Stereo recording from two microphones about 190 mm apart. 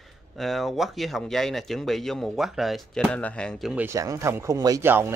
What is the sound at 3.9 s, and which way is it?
Speech, 15° right (ahead or behind).